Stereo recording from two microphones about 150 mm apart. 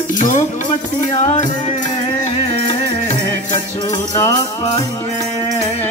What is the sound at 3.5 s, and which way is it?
Music, 30° left (ahead or behind).